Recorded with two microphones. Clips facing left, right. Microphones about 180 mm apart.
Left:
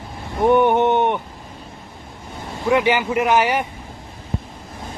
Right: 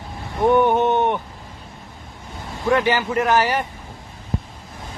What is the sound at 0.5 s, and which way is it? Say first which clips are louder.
Speech: left 2 dB; 20° left (ahead or behind).